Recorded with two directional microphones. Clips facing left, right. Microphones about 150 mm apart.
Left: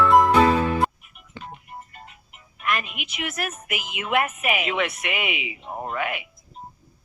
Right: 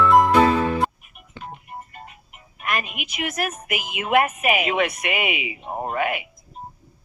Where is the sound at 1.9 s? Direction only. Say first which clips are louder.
Right 4 dB; 45° right (ahead or behind).